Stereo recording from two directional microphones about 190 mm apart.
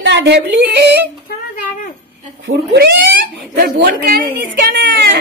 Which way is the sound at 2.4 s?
65° right (ahead or behind).